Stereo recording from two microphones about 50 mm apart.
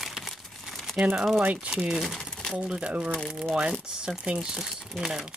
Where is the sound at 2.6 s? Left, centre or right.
Right.